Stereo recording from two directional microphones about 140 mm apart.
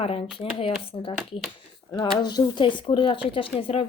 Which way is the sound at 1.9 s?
35° left (ahead or behind).